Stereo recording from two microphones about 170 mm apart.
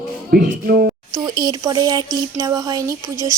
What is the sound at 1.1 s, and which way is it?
Speech, 20° right (ahead or behind).